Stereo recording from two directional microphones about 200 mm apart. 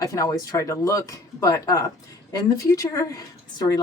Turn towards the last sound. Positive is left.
turn(degrees=20)  # may be behind; listen again after turning